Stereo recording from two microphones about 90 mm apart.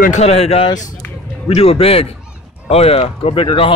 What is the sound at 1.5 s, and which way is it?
Speech, 90° left.